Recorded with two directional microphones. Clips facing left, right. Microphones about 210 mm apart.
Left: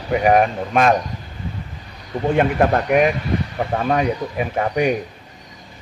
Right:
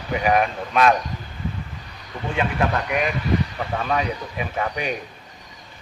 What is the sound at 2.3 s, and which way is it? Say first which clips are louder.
Speech: left 6 dB; 45° left (ahead or behind).